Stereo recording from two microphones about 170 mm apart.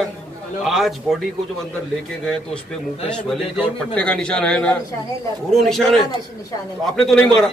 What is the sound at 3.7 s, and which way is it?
A man's voice, 5° left (ahead or behind).